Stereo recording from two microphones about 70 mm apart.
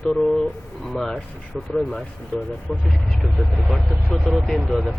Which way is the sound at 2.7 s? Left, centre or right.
Centre.